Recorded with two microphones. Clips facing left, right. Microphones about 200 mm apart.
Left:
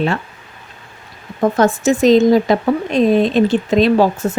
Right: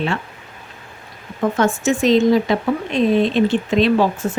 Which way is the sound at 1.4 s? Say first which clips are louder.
Left 4 dB; 40° left (ahead or behind).